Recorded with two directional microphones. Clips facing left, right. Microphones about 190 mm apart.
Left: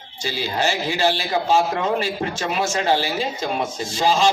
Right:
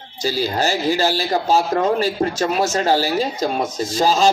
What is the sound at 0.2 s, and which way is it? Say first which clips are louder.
Speech: right 4 dB; 40° right (ahead or behind).